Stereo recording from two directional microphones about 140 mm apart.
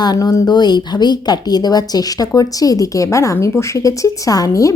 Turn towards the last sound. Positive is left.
turn(degrees=25)  # may be behind; listen again after turning